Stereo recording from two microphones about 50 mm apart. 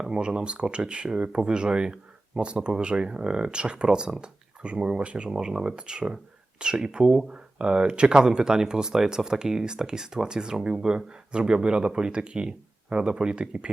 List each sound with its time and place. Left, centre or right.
0.0 s speech: centre